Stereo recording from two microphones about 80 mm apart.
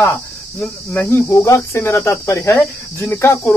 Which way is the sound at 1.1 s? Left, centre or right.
Left.